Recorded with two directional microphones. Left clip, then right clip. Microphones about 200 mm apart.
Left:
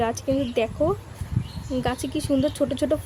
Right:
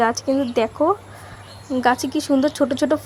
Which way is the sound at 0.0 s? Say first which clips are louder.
Right 5 dB; 15° right (ahead or behind).